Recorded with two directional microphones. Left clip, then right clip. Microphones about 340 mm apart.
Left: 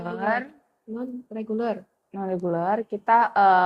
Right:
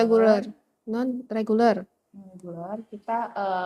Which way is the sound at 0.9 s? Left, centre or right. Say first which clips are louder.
Right 6 dB; right.